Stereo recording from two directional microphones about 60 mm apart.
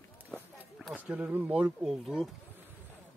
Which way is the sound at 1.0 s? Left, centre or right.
Right.